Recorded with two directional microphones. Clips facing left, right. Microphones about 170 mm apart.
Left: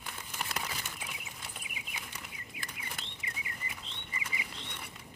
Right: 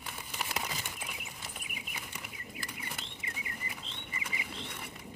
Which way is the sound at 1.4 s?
5° right (ahead or behind).